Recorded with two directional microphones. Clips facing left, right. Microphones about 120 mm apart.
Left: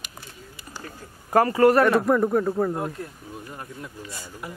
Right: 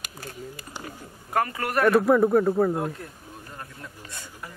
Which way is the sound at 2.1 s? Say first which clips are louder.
Right 2 dB; 5° right (ahead or behind).